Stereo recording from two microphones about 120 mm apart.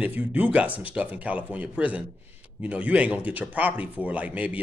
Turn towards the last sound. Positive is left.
turn(degrees=-10)  # may be behind; listen again after turning